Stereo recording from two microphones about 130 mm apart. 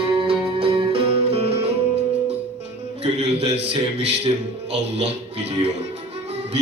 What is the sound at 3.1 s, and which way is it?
Music, 55° right (ahead or behind).